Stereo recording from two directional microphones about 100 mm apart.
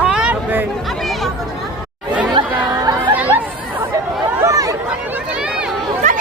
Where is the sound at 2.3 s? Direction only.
40° right (ahead or behind).